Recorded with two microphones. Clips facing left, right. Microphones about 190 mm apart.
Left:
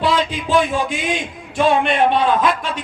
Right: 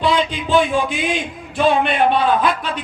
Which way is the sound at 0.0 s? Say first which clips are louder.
Right 1 dB; centre (ahead or behind).